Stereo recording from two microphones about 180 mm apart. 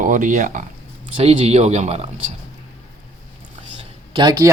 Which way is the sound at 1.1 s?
30° right (ahead or behind).